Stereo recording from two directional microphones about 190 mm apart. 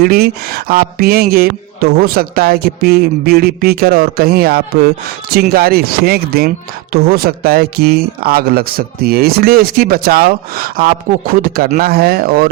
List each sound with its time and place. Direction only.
0.0 s speech: 55° right (ahead or behind)